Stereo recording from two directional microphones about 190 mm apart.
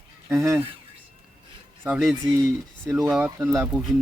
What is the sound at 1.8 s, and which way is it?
Speech, 5° right (ahead or behind).